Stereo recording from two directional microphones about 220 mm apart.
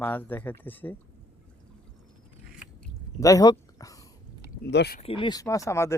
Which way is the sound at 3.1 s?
15° left (ahead or behind).